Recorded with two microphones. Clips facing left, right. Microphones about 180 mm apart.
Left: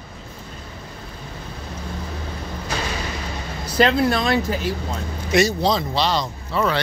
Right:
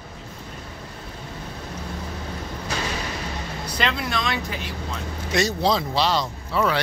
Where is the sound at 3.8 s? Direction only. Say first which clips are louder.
Left 10 dB; 35° left (ahead or behind).